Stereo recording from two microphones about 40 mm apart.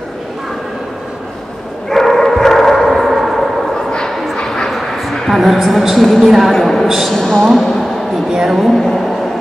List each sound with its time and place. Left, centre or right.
1.9 s bow-wow: centre
4.6 s a sound: centre
5.3 s a woman's voice: centre
6.5 s a woman's voice: centre
7.4 s a sound: centre
8.5 s a woman's voice: centre